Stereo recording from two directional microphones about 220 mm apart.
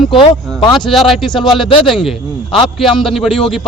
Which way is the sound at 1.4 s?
20° left (ahead or behind).